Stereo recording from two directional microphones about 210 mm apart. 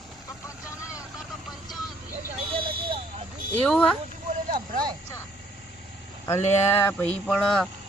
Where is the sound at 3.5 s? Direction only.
5° left (ahead or behind).